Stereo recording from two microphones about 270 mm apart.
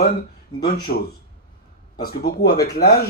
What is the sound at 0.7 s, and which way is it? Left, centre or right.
Speech, left.